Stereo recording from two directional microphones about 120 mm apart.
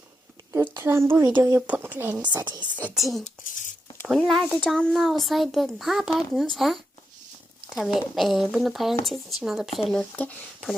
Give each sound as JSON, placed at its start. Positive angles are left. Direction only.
{"t": 0.5, "sound": "a sound", "side_deg": -20}
{"t": 1.4, "sound": "speech", "side_deg": -25}
{"t": 1.6, "sound": "speech", "side_deg": -15}
{"t": 2.5, "sound": "a woman's voice", "side_deg": -40}
{"t": 2.9, "sound": "a child's voice", "side_deg": 0}
{"t": 3.2, "sound": "speech", "side_deg": 90}
{"t": 4.0, "sound": "a child's voice", "side_deg": 0}